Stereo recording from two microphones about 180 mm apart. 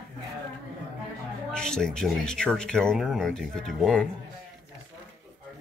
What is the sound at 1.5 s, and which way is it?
Speech, 5° left (ahead or behind).